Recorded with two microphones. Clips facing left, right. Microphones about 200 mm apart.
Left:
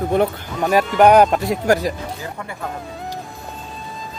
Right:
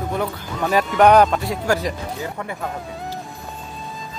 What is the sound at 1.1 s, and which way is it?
Speech, 10° left (ahead or behind).